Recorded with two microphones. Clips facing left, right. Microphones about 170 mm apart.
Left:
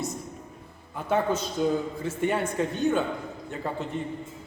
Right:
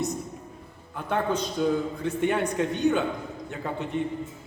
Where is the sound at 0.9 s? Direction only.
5° left (ahead or behind).